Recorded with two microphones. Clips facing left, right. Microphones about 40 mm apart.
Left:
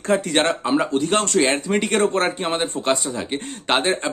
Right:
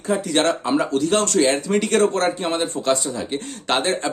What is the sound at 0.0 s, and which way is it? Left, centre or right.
Speech, left.